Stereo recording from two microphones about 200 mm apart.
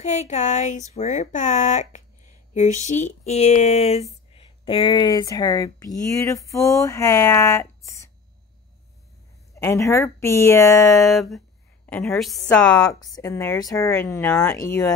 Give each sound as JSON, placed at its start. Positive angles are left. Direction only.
{"t": 0.0, "sound": "speech", "side_deg": 35}
{"t": 9.6, "sound": "speech", "side_deg": 15}
{"t": 11.1, "sound": "a woman's voice", "side_deg": 0}
{"t": 12.7, "sound": "speech", "side_deg": 20}